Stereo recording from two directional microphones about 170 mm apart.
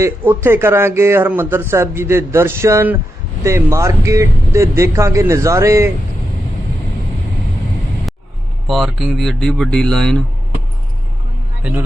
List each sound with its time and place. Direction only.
0.0 s speech: 15° right (ahead or behind)
8.1 s vehicle: centre (ahead or behind)
8.6 s speech: centre (ahead or behind)